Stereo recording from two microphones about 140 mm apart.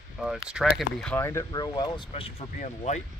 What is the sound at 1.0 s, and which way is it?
Speech, 15° left (ahead or behind).